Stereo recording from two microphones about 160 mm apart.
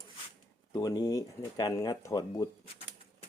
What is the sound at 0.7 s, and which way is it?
Speech, 25° left (ahead or behind).